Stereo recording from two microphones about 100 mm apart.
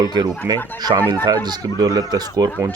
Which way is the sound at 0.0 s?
45° right (ahead or behind).